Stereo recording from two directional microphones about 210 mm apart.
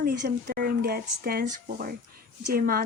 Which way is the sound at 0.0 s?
55° right (ahead or behind).